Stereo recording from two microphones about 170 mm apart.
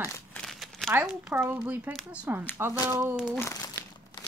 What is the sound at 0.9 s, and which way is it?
Speech, 5° right (ahead or behind).